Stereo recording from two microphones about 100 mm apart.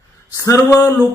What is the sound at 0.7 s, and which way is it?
Speech, 25° left (ahead or behind).